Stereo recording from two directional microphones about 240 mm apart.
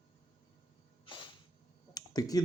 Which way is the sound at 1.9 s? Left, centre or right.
Centre.